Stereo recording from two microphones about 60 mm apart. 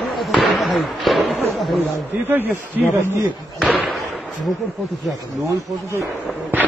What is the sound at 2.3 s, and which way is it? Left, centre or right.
Speech, right.